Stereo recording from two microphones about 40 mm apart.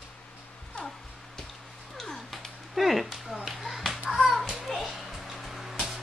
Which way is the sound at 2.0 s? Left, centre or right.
Centre.